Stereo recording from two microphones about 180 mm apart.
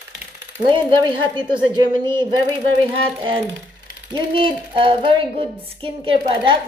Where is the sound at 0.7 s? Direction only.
25° right (ahead or behind).